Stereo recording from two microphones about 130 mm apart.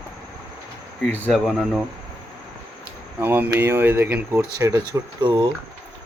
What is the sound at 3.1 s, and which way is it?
Speech, 15° right (ahead or behind).